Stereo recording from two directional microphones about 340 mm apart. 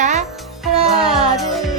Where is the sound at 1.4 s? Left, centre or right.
Centre.